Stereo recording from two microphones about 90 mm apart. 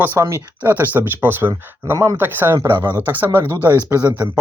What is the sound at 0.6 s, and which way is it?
Speech, 20° right (ahead or behind).